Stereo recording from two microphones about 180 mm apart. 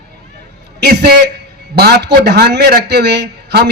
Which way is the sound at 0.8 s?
65° right (ahead or behind).